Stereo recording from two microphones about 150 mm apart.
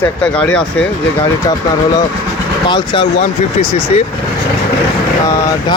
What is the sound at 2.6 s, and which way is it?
Speech, 30° left (ahead or behind).